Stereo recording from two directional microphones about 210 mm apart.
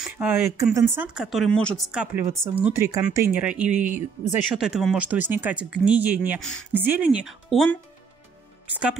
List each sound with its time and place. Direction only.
0.0 s a sound: 10° right (ahead or behind)
0.7 s speech: 10° right (ahead or behind)
3.7 s speech: 35° right (ahead or behind)
4.6 s speech: centre (ahead or behind)